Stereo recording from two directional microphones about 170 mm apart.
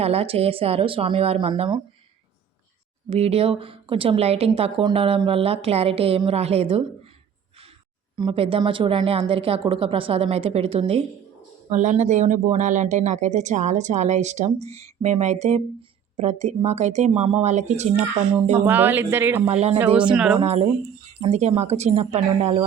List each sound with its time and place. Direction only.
0.0 s a woman's voice: 35° right (ahead or behind)
3.1 s a woman's voice: 35° right (ahead or behind)
8.1 s a woman's voice: 30° right (ahead or behind)
18.6 s speech: 10° right (ahead or behind)
19.5 s a woman's voice: 35° right (ahead or behind)
20.0 s speech: 5° right (ahead or behind)
20.4 s a woman's voice: 40° right (ahead or behind)